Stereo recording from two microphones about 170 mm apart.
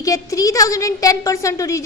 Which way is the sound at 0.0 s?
20° left (ahead or behind).